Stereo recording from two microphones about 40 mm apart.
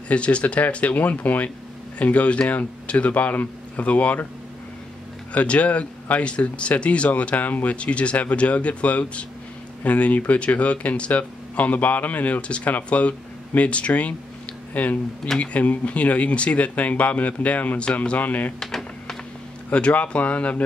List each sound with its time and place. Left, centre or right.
0.1 s speech: left
5.3 s speech: left
7.7 s speech: left
14.7 s speech: left
15.3 s speech: left
19.7 s speech: left